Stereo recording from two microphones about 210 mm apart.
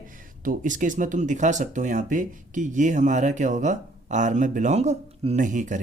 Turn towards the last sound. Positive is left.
turn(degrees=-35)  # may be behind; listen again after turning